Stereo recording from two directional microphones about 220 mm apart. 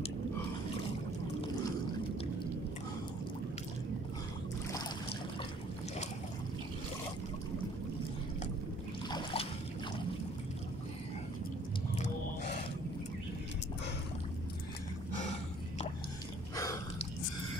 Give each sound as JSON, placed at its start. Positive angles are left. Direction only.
{"t": 9.1, "sound": "trickle", "side_deg": 25}